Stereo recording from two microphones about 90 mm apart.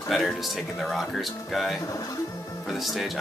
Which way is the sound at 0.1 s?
Centre (ahead or behind).